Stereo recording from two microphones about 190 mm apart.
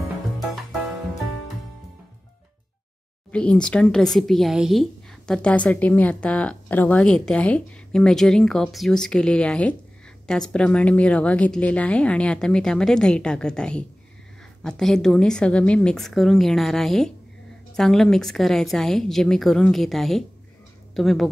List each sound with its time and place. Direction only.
3.3 s speech: 5° left (ahead or behind)